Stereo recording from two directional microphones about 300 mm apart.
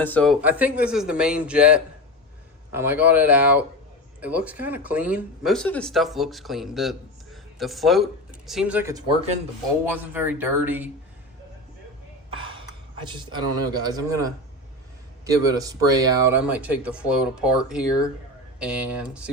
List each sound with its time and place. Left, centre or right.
0.0 s a man's voice: centre
12.3 s gasp: centre
13.1 s a man's voice: centre